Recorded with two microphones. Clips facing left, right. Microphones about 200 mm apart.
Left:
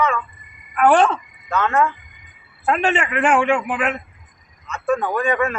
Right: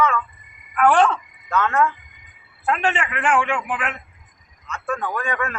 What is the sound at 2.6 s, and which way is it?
A man's voice, 20° left (ahead or behind).